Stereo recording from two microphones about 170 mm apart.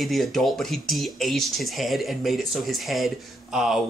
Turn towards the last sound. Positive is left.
turn(degrees=0)  # may be behind; listen again after turning